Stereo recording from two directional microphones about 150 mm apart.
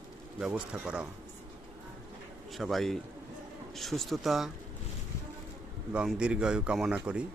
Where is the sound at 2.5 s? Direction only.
Centre (ahead or behind).